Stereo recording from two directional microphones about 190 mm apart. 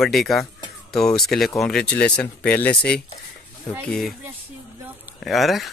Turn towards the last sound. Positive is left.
turn(degrees=0)  # may be behind; listen again after turning